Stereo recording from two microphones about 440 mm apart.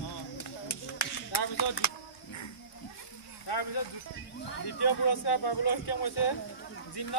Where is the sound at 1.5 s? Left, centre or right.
Left.